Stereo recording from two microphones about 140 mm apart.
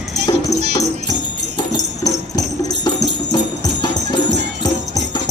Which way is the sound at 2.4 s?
30° left (ahead or behind).